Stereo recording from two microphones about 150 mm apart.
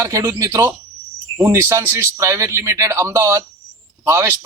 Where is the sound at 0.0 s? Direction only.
20° right (ahead or behind).